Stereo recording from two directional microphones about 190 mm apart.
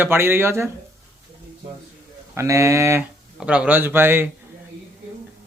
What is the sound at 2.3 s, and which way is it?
Speech, 15° right (ahead or behind).